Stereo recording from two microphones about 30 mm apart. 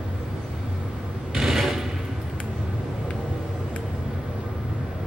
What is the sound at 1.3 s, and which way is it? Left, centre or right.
Mechanisms, centre.